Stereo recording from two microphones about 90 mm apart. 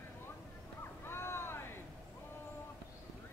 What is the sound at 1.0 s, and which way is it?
Vehicle, 25° left (ahead or behind).